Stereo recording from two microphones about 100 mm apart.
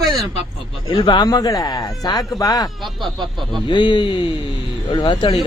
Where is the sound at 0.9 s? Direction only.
50° left (ahead or behind).